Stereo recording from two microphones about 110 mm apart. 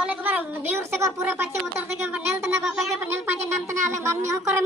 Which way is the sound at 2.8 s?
25° right (ahead or behind).